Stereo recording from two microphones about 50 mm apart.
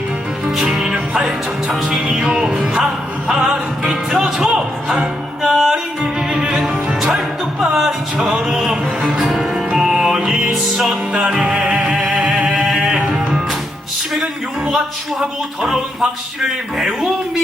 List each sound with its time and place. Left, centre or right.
0.4 s music: centre
11.9 s music: centre
12.2 s music: right
12.5 s a sound: centre
13.1 s music: centre
14.1 s a sound: centre
15.2 s music: centre